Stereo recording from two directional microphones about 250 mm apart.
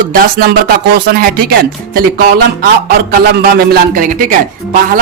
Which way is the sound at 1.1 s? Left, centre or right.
Right.